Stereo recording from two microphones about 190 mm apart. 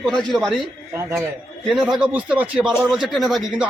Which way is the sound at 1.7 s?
5° right (ahead or behind).